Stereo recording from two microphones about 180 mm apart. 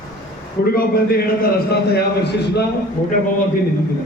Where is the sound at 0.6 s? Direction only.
55° left (ahead or behind).